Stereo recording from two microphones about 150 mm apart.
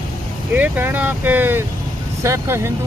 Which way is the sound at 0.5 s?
10° right (ahead or behind).